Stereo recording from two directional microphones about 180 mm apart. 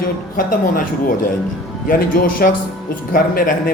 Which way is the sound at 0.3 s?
50° left (ahead or behind).